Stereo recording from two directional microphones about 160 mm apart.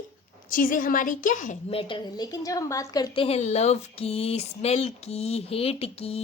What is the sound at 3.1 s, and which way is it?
Speech, 40° left (ahead or behind).